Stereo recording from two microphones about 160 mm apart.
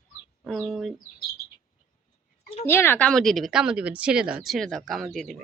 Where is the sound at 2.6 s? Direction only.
15° left (ahead or behind).